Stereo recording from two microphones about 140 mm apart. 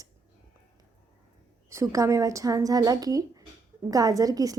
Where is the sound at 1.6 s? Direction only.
20° right (ahead or behind).